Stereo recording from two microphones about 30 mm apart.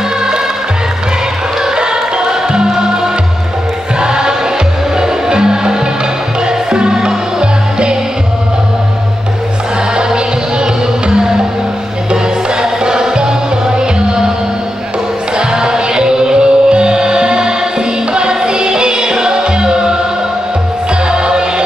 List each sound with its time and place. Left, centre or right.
1.8 s music: right
4.0 s choir: right
5.0 s music: right
11.1 s music: right
12.8 s music: right
15.3 s music: right
21.1 s music: right